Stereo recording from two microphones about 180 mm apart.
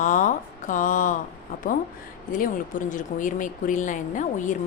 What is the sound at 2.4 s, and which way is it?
A woman's voice, 45° left (ahead or behind).